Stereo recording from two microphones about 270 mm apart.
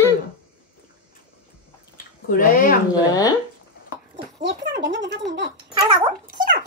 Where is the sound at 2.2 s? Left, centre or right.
Left.